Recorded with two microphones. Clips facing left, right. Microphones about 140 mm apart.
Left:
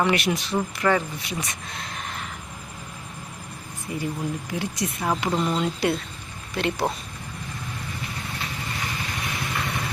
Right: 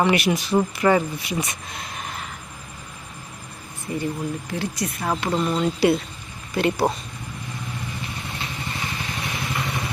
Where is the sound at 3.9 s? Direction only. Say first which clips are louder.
Right 2 dB; 10° left (ahead or behind).